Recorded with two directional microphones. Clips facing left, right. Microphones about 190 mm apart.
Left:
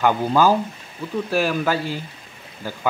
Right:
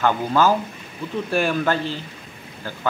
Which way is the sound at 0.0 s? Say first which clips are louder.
Left 1 dB; 10° left (ahead or behind).